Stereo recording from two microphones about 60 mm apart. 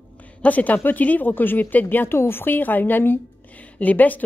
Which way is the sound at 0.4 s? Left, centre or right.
Left.